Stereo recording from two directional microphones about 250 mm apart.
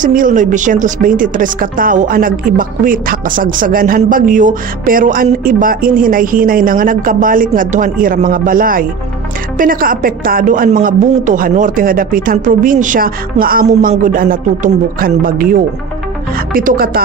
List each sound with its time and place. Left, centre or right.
0.0 s a woman's voice: right